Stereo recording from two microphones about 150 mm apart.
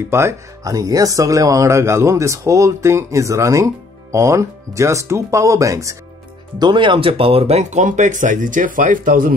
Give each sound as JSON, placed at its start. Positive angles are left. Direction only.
{"t": 0.1, "sound": "speech", "side_deg": -15}
{"t": 6.6, "sound": "speech", "side_deg": -30}